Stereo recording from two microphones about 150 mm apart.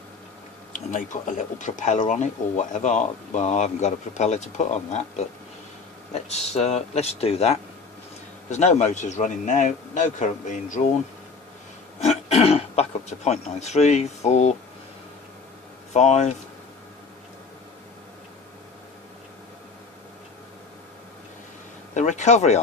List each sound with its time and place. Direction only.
0.7 s speech: 55° left (ahead or behind)
6.3 s speech: 45° left (ahead or behind)
11.9 s speech: 45° left (ahead or behind)
15.9 s speech: 50° left (ahead or behind)
21.9 s speech: 55° left (ahead or behind)